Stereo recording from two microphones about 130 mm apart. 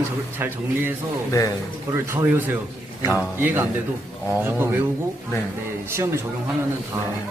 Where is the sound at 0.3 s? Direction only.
15° right (ahead or behind).